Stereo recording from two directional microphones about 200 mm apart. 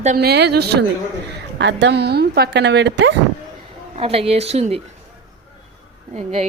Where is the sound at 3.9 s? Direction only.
30° right (ahead or behind).